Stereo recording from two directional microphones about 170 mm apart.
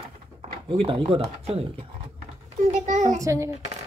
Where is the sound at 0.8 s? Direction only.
35° right (ahead or behind).